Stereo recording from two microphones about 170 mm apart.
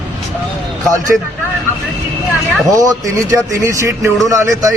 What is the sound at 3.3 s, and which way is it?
Speech, 20° right (ahead or behind).